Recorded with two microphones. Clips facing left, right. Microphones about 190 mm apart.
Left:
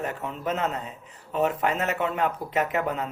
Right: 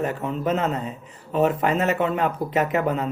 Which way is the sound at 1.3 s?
30° right (ahead or behind).